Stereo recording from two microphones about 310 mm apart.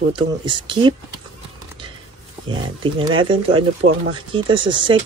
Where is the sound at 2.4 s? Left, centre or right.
Centre.